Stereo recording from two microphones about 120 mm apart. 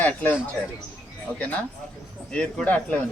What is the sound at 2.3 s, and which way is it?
Speech, 10° left (ahead or behind).